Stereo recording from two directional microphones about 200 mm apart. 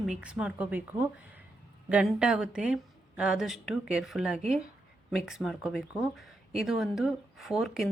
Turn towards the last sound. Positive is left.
turn(degrees=0)  # may be behind; listen again after turning